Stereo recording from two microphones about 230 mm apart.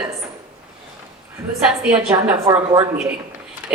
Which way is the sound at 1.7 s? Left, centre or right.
Centre.